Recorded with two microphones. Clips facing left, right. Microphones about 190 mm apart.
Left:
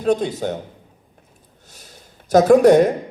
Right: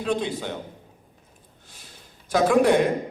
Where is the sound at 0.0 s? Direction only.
40° left (ahead or behind).